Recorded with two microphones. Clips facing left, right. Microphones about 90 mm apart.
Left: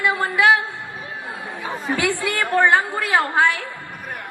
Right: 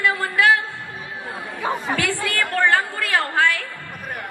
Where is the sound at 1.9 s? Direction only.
20° left (ahead or behind).